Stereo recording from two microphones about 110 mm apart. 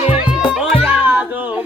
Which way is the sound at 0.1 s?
10° right (ahead or behind).